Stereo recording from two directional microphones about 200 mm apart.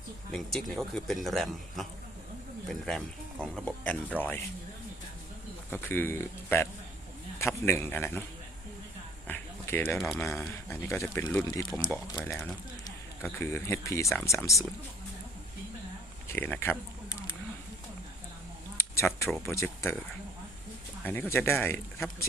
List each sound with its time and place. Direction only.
0.3 s a man's voice: centre (ahead or behind)
5.7 s speech: 10° left (ahead or behind)
9.2 s a sound: 10° left (ahead or behind)
10.0 s a man's voice: centre (ahead or behind)
10.2 s speech: 10° left (ahead or behind)
11.4 s speech: 20° left (ahead or behind)
16.3 s speech: 10° left (ahead or behind)
18.8 s a sound: 15° left (ahead or behind)
19.4 s speech: 15° left (ahead or behind)
21.0 s speech: 10° left (ahead or behind)